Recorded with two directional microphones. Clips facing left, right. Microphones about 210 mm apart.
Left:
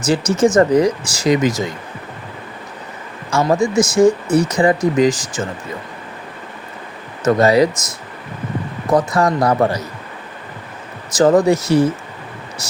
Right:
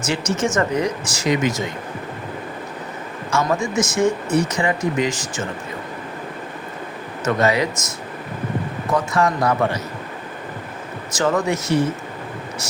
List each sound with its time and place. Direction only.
0.0 s speech: 35° left (ahead or behind)
3.2 s speech: 35° left (ahead or behind)
7.3 s speech: 35° left (ahead or behind)
8.9 s speech: 35° left (ahead or behind)
11.2 s speech: 35° left (ahead or behind)